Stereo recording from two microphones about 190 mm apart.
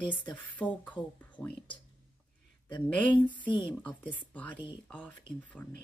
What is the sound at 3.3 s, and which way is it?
Speech, 25° left (ahead or behind).